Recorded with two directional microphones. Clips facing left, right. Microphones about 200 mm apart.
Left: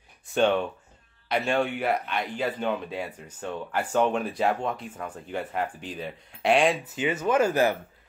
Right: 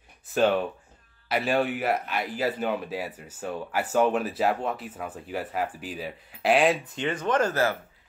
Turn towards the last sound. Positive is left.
turn(degrees=10)  # may be behind; listen again after turning